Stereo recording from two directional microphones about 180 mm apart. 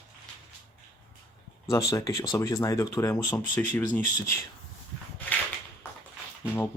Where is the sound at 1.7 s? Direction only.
20° left (ahead or behind).